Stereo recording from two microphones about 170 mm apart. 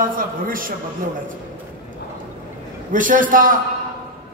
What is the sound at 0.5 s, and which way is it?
Speech, 55° right (ahead or behind).